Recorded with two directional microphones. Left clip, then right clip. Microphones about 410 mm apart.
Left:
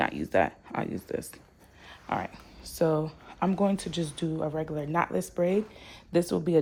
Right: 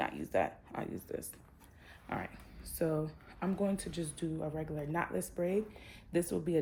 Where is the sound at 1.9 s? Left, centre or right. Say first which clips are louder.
Left 9 dB; centre.